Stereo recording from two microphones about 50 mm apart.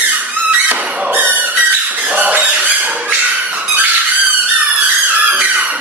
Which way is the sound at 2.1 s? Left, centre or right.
Right.